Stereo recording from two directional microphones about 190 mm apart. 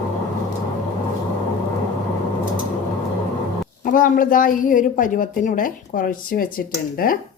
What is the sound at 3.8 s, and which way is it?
A woman's voice, 45° left (ahead or behind).